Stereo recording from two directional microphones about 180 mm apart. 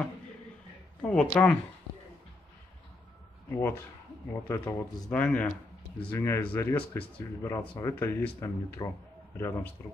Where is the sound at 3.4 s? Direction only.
15° left (ahead or behind).